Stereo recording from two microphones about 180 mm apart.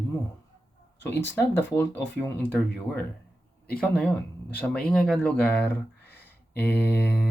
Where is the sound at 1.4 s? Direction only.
10° left (ahead or behind).